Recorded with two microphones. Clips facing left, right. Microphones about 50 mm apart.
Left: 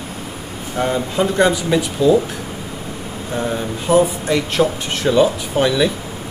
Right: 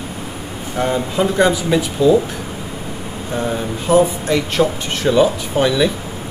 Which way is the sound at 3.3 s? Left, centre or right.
Centre.